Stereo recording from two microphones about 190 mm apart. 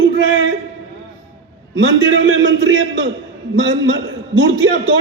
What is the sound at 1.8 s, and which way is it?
A man's voice, 80° right.